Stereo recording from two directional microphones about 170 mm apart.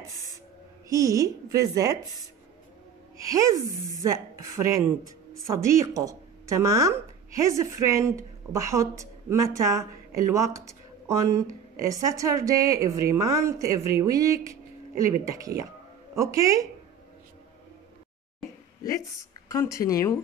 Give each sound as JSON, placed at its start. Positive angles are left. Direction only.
{"t": 0.8, "sound": "a woman's voice", "side_deg": -20}
{"t": 3.2, "sound": "a woman's voice", "side_deg": -20}
{"t": 18.8, "sound": "speech", "side_deg": 20}